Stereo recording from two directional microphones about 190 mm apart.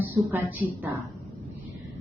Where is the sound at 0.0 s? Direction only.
10° right (ahead or behind).